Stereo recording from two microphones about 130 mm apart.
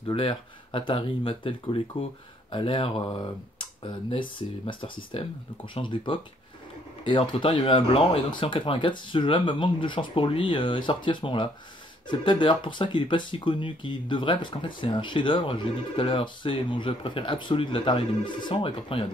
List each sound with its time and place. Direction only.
0.0 s speech: 40° left (ahead or behind)